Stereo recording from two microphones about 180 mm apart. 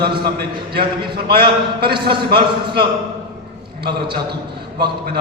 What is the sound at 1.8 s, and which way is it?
A man's voice, 60° right (ahead or behind).